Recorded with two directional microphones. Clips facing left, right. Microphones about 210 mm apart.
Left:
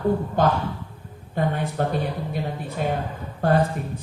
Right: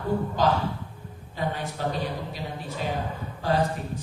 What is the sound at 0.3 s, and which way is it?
A man's voice, 55° left (ahead or behind).